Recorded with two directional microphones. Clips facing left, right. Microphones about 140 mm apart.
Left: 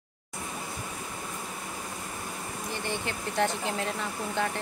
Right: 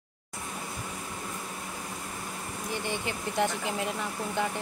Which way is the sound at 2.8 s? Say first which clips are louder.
Left 1 dB; 15° right (ahead or behind).